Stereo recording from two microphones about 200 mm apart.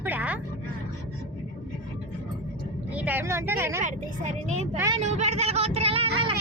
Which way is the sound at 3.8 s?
35° right (ahead or behind).